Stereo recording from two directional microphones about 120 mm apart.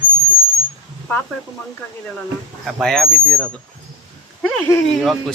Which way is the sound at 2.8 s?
5° left (ahead or behind).